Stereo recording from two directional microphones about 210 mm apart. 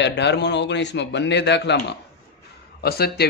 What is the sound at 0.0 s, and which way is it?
A man's voice, 55° left (ahead or behind).